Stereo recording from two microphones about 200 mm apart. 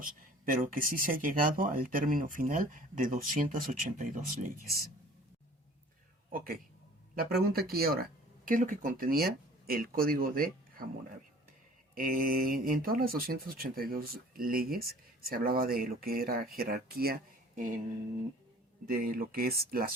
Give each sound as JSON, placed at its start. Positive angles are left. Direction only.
{"t": 0.0, "sound": "speech", "side_deg": -45}
{"t": 6.3, "sound": "speech", "side_deg": -45}
{"t": 11.9, "sound": "speech", "side_deg": -45}
{"t": 18.9, "sound": "speech", "side_deg": -45}